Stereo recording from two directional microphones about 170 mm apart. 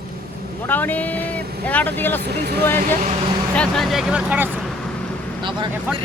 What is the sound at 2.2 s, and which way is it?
Speech, 75° right (ahead or behind).